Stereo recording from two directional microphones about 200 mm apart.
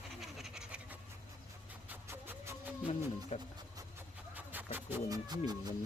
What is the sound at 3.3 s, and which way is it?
Speech, 35° left (ahead or behind).